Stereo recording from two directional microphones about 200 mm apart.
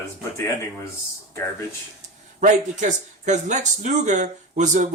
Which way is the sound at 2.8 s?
35° right (ahead or behind).